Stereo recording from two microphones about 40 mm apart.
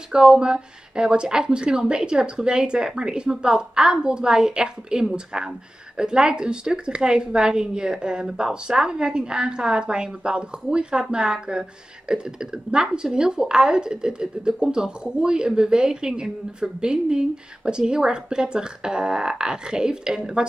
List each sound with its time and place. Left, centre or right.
0.1 s speech: centre